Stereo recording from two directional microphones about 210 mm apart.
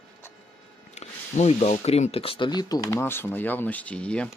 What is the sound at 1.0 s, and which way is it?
Speech, 30° left (ahead or behind).